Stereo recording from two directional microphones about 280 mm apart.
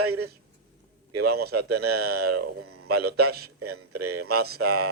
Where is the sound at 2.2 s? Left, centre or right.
Right.